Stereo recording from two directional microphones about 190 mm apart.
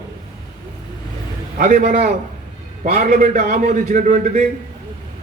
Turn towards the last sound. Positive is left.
turn(degrees=-40)  # may be behind; listen again after turning